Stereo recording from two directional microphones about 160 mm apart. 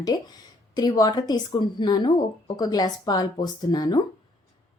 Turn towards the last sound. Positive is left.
turn(degrees=25)  # may be behind; listen again after turning